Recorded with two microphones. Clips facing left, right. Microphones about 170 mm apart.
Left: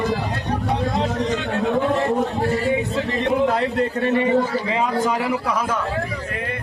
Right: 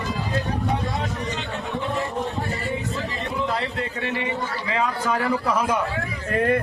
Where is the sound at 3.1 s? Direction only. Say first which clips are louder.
Left 9 dB; 60° left (ahead or behind).